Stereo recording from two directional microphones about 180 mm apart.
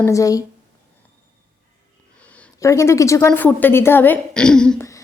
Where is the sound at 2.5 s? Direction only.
15° left (ahead or behind).